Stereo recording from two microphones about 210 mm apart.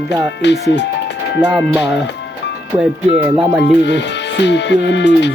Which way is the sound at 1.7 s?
5° right (ahead or behind).